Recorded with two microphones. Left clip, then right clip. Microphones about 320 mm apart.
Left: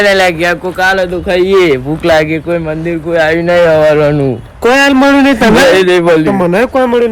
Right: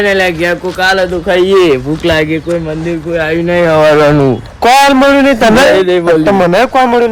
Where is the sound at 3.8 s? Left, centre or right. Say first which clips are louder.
Right 2 dB; centre.